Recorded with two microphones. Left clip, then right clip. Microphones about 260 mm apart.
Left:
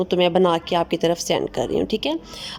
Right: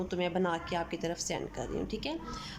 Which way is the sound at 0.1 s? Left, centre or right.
Left.